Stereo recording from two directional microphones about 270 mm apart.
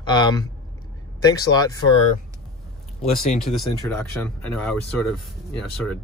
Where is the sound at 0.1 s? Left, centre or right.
Centre.